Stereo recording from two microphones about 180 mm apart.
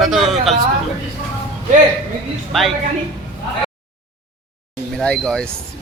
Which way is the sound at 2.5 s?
Centre (ahead or behind).